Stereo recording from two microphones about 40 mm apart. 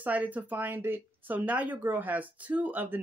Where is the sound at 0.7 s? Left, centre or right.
Right.